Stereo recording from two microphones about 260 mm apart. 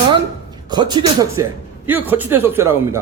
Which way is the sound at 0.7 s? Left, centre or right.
Centre.